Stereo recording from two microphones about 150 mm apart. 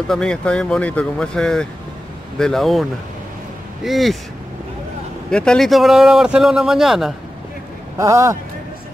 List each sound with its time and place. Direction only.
0.1 s speech: 5° left (ahead or behind)
5.3 s speech: 5° left (ahead or behind)
8.0 s speech: 20° right (ahead or behind)